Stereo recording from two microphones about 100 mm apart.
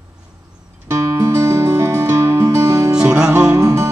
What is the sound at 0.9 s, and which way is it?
Music, 30° right (ahead or behind).